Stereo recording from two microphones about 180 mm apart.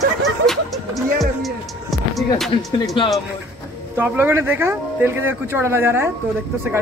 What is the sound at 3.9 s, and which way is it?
Speech, 10° right (ahead or behind).